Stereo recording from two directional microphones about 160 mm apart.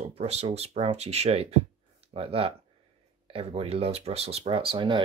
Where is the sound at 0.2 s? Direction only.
40° right (ahead or behind).